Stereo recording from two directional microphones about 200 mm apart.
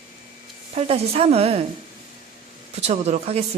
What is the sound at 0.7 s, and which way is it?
Speech, 30° right (ahead or behind).